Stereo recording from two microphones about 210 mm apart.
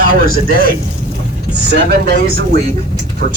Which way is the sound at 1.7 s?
55° right (ahead or behind).